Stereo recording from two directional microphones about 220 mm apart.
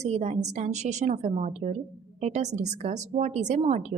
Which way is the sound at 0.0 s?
30° right (ahead or behind).